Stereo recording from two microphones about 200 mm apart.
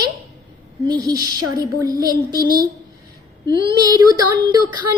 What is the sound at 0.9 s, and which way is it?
A woman's voice, 20° right (ahead or behind).